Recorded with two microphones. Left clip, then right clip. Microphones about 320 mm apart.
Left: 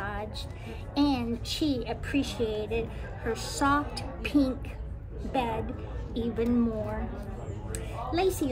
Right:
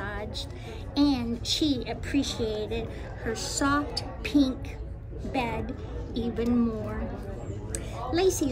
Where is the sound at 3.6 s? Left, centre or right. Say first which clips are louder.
Left 1 dB; centre.